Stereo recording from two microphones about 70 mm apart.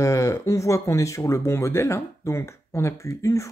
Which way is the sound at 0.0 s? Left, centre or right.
Left.